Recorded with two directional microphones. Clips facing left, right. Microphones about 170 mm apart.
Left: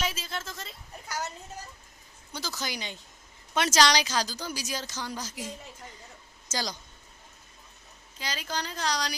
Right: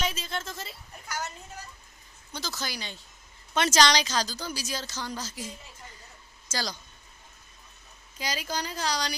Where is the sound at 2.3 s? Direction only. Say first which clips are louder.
Even; 10° left (ahead or behind).